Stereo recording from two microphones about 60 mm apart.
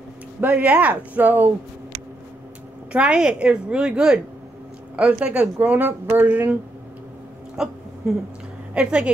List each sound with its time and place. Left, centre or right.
0.5 s speech: right
2.9 s a woman's voice: centre
7.5 s hiccup: centre
8.7 s a woman's voice: centre